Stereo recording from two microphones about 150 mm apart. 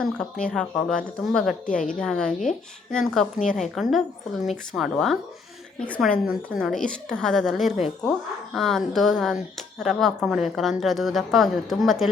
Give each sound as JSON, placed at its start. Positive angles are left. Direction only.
{"t": 0.0, "sound": "a woman's voice", "side_deg": 5}
{"t": 1.6, "sound": "a woman's voice", "side_deg": 60}
{"t": 2.0, "sound": "a woman's voice", "side_deg": 5}
{"t": 6.2, "sound": "a woman's voice", "side_deg": 0}